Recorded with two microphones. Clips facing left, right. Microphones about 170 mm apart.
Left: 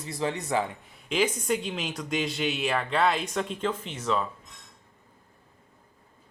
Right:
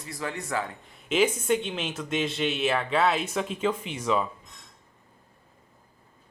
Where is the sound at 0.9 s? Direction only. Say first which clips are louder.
Right 4 dB; 5° right (ahead or behind).